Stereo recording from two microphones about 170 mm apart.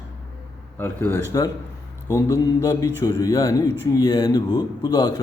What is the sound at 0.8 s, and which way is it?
A man's voice, 10° left (ahead or behind).